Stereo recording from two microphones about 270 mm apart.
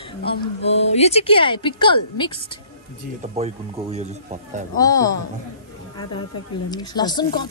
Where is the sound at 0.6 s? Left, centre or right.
Left.